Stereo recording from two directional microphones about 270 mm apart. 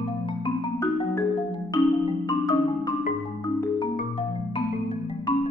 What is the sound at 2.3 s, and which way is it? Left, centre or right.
Music, centre.